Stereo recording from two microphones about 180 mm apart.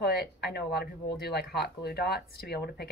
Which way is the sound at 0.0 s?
65° left (ahead or behind).